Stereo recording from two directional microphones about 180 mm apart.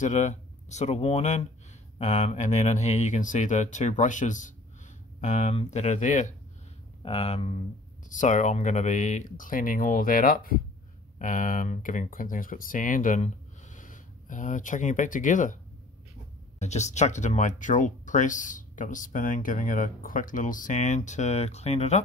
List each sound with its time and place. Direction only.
0.0 s speech: 40° left (ahead or behind)
7.0 s speech: 35° left (ahead or behind)